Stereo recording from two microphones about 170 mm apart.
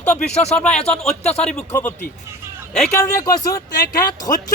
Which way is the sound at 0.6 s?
5° left (ahead or behind).